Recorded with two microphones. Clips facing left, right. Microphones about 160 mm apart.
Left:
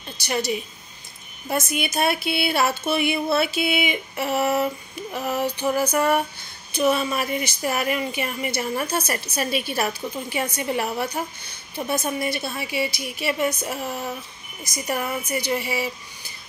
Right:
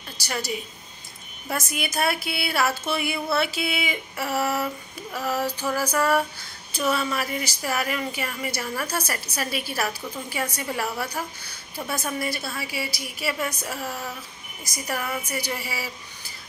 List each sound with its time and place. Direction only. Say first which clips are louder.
0.2 s speech: left 5 dB; 20° left (ahead or behind)